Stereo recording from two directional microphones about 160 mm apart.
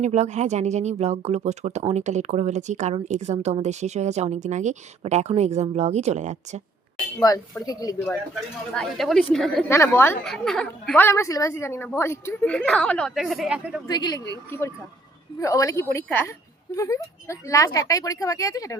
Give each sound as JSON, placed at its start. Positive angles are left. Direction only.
{"t": 0.0, "sound": "speech", "side_deg": -45}
{"t": 7.3, "sound": "a woman's voice", "side_deg": 25}
{"t": 8.7, "sound": "a woman's voice", "side_deg": 5}
{"t": 9.6, "sound": "a woman's voice", "side_deg": 15}
{"t": 10.2, "sound": "a woman's voice", "side_deg": 5}
{"t": 10.9, "sound": "a woman's voice", "side_deg": 15}
{"t": 13.8, "sound": "a woman's voice", "side_deg": 25}
{"t": 15.4, "sound": "a woman's voice", "side_deg": 20}